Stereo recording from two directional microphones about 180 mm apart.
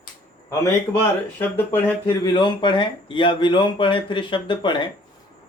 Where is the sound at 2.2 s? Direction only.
25° left (ahead or behind).